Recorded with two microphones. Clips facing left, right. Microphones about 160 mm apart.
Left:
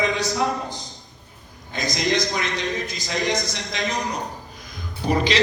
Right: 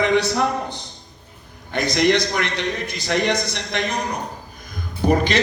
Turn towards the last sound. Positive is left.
turn(degrees=-55)  # may be behind; listen again after turning